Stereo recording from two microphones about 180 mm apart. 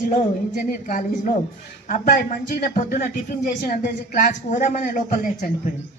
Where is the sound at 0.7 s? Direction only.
45° left (ahead or behind).